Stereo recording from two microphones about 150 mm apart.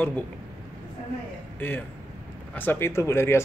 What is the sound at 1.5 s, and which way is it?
Speech, 10° left (ahead or behind).